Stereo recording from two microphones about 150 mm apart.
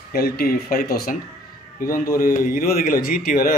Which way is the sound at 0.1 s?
90° left.